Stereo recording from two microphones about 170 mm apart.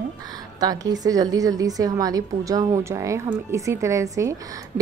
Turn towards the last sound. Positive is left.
turn(degrees=-20)  # may be behind; listen again after turning